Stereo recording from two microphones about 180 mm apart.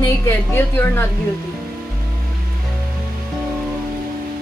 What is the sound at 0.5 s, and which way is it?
Speech, 15° left (ahead or behind).